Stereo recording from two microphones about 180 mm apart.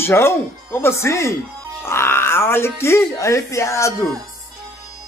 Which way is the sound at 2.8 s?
15° left (ahead or behind).